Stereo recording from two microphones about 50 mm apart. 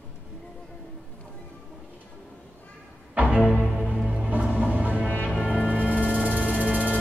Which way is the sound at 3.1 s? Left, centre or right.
Right.